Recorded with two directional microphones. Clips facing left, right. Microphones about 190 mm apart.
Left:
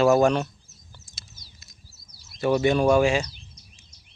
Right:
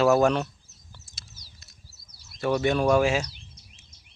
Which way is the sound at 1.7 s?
65° right (ahead or behind).